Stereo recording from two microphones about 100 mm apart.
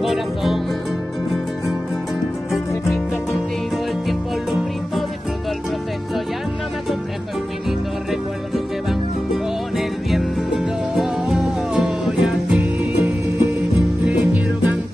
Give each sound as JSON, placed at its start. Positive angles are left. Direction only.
{"t": 0.0, "sound": "speech", "side_deg": 0}
{"t": 4.1, "sound": "music", "side_deg": 0}
{"t": 9.3, "sound": "music", "side_deg": -5}